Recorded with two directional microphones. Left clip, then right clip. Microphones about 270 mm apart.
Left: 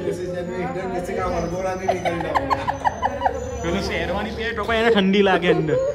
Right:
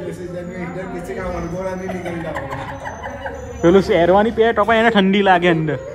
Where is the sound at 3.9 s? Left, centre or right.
Centre.